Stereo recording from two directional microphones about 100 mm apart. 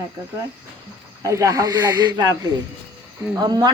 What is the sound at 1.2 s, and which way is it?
A man's voice, 30° right (ahead or behind).